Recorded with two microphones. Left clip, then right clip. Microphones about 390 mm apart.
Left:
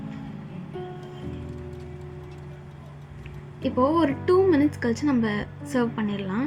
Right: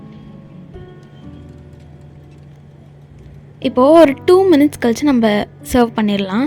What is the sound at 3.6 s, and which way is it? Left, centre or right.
A woman's voice, right.